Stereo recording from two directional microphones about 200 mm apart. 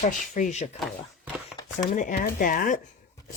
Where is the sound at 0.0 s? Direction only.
40° left (ahead or behind).